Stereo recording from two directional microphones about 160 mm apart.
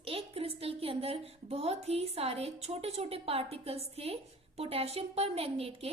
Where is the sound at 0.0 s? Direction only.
35° right (ahead or behind).